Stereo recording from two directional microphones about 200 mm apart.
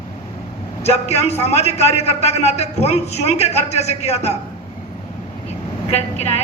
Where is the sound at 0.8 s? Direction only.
30° left (ahead or behind).